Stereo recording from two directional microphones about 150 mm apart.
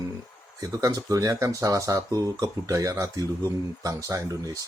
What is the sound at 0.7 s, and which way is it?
Speech, 25° right (ahead or behind).